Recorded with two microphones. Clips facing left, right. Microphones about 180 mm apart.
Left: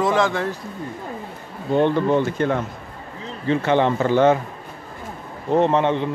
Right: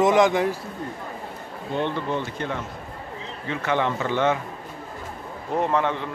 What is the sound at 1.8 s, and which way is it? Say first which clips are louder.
Speech: left 8 dB; 50° left (ahead or behind).